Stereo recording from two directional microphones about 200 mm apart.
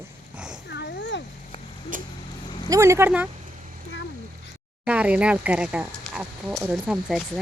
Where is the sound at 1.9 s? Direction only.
40° right (ahead or behind).